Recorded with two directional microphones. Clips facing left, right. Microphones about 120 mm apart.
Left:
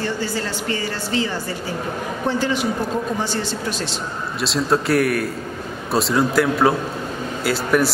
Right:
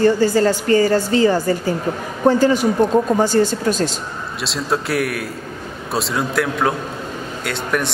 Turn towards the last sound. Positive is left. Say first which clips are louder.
# left 3 dB
turn(degrees=5)  # may be behind; listen again after turning